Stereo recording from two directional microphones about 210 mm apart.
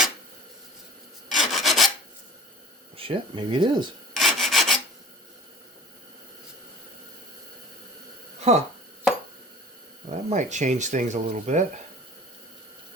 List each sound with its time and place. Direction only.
1.4 s filing: centre (ahead or behind)
3.0 s speech: 25° right (ahead or behind)
4.1 s rub: centre (ahead or behind)
8.4 s a sound: 30° right (ahead or behind)
10.1 s speech: 35° right (ahead or behind)